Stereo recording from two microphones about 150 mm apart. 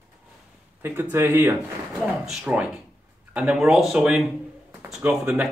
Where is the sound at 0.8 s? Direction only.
15° right (ahead or behind).